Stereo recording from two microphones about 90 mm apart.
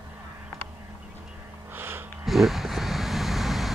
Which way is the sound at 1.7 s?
25° right (ahead or behind).